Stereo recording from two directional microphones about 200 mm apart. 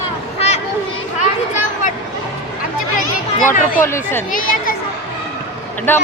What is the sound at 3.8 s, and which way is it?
Speech, 10° left (ahead or behind).